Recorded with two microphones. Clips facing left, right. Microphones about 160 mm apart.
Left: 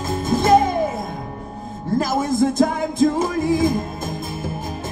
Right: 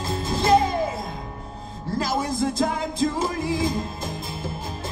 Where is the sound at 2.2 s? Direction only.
50° left (ahead or behind).